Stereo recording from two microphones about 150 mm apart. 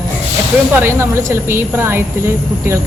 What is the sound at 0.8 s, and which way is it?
Speech, 20° right (ahead or behind).